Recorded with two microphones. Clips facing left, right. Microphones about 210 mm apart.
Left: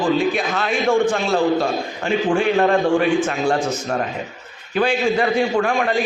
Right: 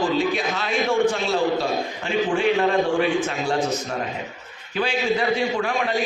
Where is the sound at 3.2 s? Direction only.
50° left (ahead or behind).